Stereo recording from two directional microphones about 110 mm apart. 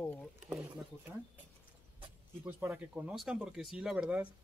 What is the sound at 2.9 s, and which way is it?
Speech, 5° right (ahead or behind).